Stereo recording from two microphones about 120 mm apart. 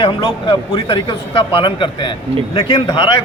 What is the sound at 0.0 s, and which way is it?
A man's voice, 45° left (ahead or behind).